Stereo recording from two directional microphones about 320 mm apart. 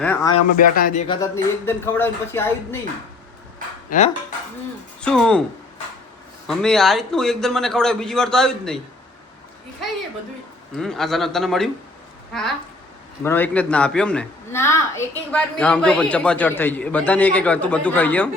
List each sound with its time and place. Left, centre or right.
0.0 s speech: centre
0.5 s speech: left
1.0 s speech: centre
3.8 s dishes: left
4.9 s speech: centre
6.5 s a woman's voice: centre
10.8 s a woman's voice: centre